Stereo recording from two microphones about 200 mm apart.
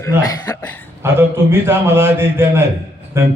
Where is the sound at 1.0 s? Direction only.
10° right (ahead or behind).